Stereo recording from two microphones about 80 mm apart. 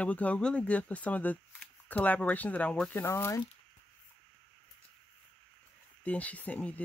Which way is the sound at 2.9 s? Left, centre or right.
Left.